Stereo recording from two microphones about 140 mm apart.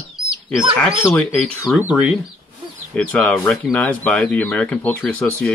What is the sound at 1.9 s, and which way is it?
Speech, 10° right (ahead or behind).